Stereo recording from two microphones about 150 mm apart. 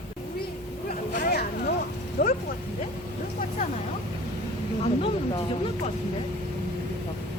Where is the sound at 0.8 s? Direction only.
70° left (ahead or behind); by 1.7 s 90° left.